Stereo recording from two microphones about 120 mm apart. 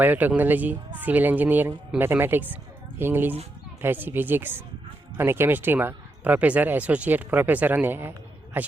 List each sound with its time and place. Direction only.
0.0 s speech: 15° right (ahead or behind)